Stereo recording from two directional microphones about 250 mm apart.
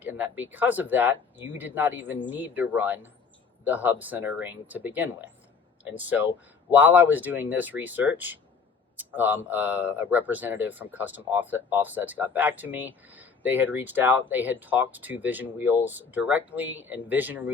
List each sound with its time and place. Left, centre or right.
0.0 s speech: centre